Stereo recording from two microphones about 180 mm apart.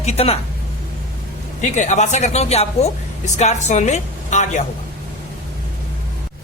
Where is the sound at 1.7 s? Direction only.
40° left (ahead or behind).